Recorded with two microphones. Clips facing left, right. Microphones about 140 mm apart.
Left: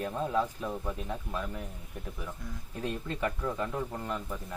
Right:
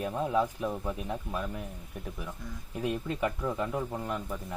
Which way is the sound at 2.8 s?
10° right (ahead or behind).